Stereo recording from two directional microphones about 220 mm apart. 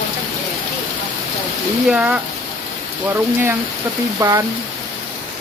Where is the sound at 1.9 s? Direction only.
5° right (ahead or behind).